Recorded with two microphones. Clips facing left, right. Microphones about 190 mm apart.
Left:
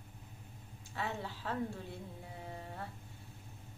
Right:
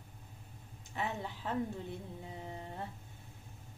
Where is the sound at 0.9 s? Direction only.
20° right (ahead or behind).